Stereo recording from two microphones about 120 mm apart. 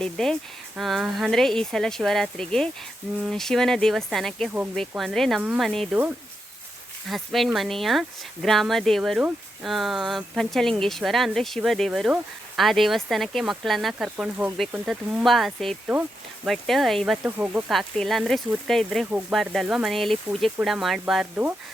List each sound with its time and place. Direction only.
0.0 s speech: 5° left (ahead or behind)
5.9 s speech: 15° right (ahead or behind)
7.1 s speech: centre (ahead or behind)
15.9 s speech: 15° right (ahead or behind)
16.5 s speech: centre (ahead or behind)
17.2 s speech: 15° right (ahead or behind)
17.7 s speech: 5° left (ahead or behind)